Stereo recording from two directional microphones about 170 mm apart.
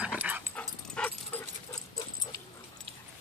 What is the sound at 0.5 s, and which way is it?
Dog, 5° left (ahead or behind).